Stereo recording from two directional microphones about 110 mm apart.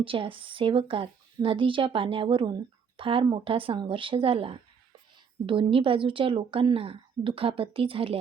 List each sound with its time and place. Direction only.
0.0 s a woman's voice: 55° right (ahead or behind)